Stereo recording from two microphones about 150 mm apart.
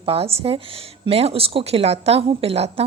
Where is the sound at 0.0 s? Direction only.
40° right (ahead or behind).